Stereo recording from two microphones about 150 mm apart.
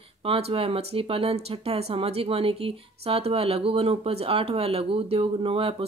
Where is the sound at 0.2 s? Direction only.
40° right (ahead or behind).